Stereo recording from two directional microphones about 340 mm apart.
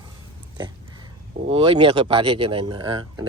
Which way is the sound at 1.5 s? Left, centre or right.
Centre.